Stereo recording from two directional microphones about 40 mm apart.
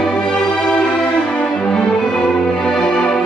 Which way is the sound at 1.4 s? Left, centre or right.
Centre.